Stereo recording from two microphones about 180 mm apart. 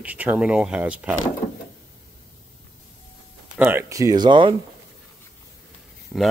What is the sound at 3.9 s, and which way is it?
Speech, 20° right (ahead or behind).